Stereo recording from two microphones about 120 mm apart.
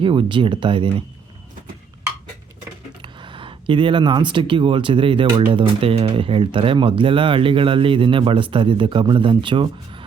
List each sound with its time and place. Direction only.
0.0 s speech: 45° right (ahead or behind)
3.0 s speech: 45° right (ahead or behind)